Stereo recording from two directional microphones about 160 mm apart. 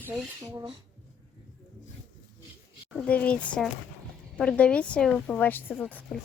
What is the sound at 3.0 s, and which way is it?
Speech, 10° left (ahead or behind).